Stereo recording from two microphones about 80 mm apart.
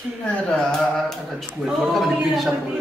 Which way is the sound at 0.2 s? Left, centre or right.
Centre.